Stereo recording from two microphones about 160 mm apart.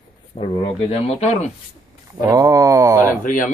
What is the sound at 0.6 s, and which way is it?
Speech, 40° left (ahead or behind).